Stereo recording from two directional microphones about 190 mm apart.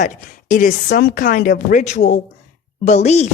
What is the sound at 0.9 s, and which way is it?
A woman's voice, 55° left (ahead or behind).